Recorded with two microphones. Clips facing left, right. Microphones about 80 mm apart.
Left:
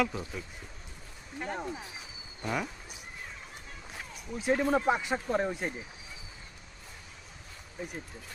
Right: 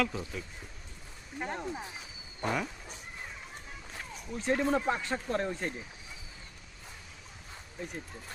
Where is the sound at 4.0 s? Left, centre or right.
Centre.